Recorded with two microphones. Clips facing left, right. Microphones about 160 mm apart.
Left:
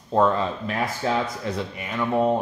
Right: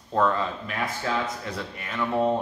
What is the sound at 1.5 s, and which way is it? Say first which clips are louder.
Speech: left 3 dB; 15° left (ahead or behind).